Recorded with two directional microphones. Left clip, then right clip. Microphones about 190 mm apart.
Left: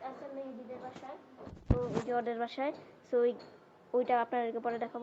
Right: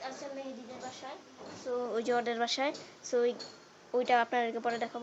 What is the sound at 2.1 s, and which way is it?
A woman's voice, 10° right (ahead or behind).